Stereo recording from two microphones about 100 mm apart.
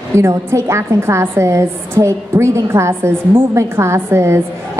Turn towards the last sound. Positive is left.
turn(degrees=-25)  # may be behind; listen again after turning